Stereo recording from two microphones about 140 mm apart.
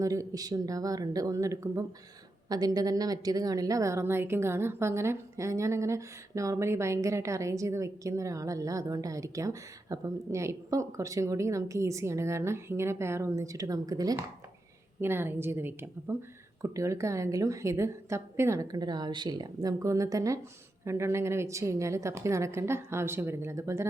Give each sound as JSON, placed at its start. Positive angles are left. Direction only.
{"t": 0.0, "sound": "a woman's voice", "side_deg": -25}
{"t": 15.0, "sound": "a woman's voice", "side_deg": -15}